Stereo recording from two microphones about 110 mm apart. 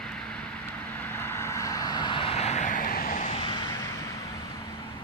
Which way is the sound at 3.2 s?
65° left (ahead or behind).